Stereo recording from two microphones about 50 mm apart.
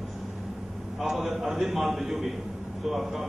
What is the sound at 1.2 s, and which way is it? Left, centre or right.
A man's voice, centre.